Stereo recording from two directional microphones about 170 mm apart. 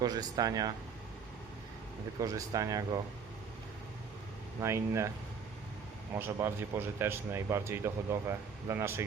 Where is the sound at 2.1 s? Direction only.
20° right (ahead or behind).